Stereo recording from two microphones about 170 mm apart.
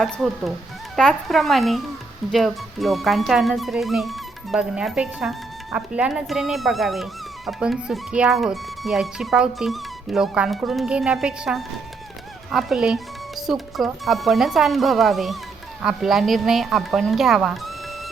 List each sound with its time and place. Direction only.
0.0 s speech: centre (ahead or behind)